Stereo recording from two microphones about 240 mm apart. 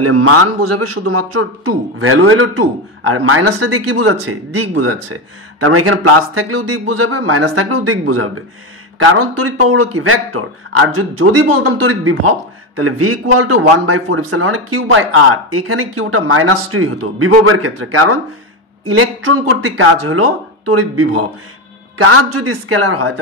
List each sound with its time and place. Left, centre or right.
0.0 s speech: right
2.0 s speech: right